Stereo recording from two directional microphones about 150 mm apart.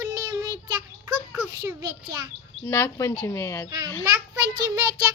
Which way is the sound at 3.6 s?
25° right (ahead or behind).